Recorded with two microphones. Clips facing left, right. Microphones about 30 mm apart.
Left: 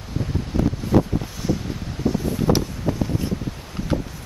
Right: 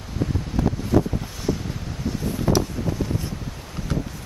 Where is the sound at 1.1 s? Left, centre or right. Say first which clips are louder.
Left 2 dB; centre.